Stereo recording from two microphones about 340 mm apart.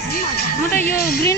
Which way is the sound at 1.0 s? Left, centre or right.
Left.